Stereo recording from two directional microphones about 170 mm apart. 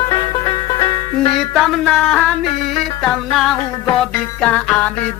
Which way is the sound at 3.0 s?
Centre (ahead or behind).